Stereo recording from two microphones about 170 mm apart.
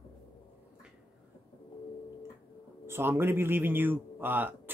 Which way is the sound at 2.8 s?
15° right (ahead or behind).